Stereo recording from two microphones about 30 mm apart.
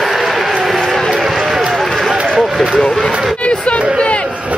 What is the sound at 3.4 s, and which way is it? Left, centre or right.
Chatter, left.